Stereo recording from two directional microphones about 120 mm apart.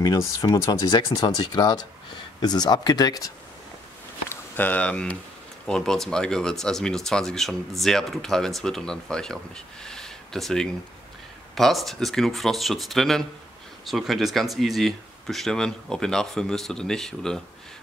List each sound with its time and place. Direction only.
0.0 s speech: 30° left (ahead or behind)
4.3 s speech: 15° left (ahead or behind)
9.8 s a sound: 5° left (ahead or behind)
11.5 s speech: centre (ahead or behind)